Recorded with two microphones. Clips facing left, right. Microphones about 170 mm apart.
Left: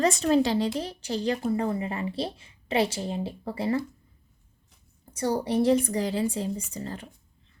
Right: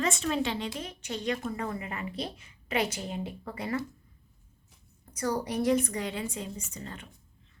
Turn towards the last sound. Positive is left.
turn(degrees=35)  # may be behind; listen again after turning